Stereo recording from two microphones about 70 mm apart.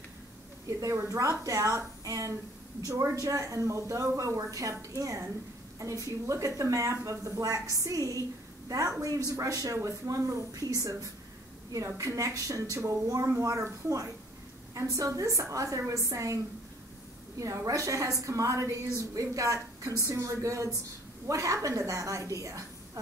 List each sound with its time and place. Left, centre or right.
0.7 s a woman's voice: right
17.4 s speech: right